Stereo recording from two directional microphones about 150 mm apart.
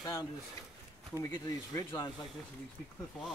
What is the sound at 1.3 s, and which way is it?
Speech, 25° left (ahead or behind).